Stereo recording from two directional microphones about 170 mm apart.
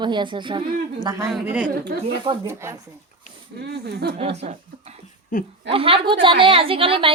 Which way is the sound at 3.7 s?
70° right (ahead or behind).